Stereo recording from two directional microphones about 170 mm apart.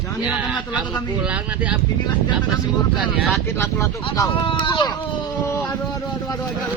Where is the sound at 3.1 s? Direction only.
5° right (ahead or behind).